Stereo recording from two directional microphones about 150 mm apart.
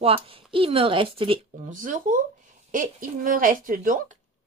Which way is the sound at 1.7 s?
60° right (ahead or behind).